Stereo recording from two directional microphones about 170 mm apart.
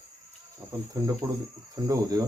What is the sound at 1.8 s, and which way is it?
Speech, 20° right (ahead or behind).